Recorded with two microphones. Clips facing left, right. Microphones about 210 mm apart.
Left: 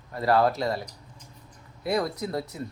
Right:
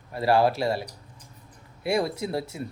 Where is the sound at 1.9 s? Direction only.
25° right (ahead or behind).